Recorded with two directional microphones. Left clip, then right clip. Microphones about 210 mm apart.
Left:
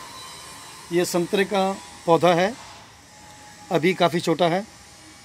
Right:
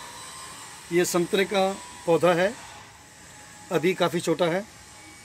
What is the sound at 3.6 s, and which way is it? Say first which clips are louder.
Speech: left 4 dB; 30° left (ahead or behind).